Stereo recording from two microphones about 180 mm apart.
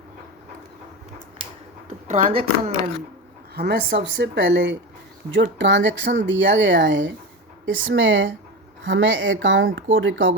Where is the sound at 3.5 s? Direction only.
65° right (ahead or behind).